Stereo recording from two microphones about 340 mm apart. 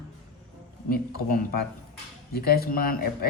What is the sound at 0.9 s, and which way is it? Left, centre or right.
A man's voice, left.